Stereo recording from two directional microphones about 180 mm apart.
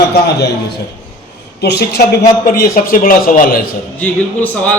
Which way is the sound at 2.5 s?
50° left (ahead or behind).